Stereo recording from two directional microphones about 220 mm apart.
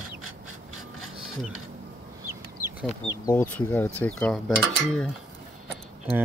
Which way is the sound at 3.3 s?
10° left (ahead or behind).